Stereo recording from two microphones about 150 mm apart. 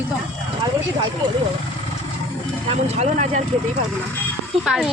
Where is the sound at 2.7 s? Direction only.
45° right (ahead or behind).